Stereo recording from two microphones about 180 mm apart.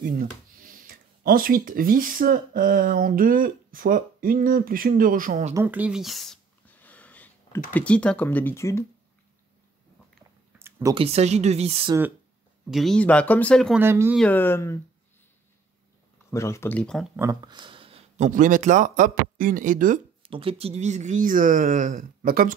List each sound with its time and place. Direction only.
0.0 s speech: 50° right (ahead or behind)
5.5 s a sound: 10° right (ahead or behind); by 7.6 s 10° left (ahead or behind)
7.7 s speech: 5° left (ahead or behind)
10.6 s a sound: 15° right (ahead or behind)
11.0 s speech: 35° right (ahead or behind)
12.6 s speech: centre (ahead or behind)
13.7 s speech: 10° right (ahead or behind)
14.1 s speech: 10° left (ahead or behind)
16.3 s speech: 15° left (ahead or behind)
17.2 s speech: 20° right (ahead or behind); by 20.0 s 45° right (ahead or behind)
20.2 s speech: 30° right (ahead or behind); by 22.5 s 55° right (ahead or behind)